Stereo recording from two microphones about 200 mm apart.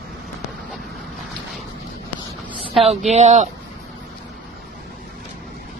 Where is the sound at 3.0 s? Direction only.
35° right (ahead or behind).